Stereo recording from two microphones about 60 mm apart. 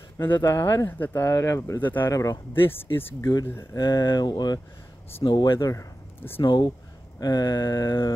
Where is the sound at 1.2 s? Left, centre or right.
Left.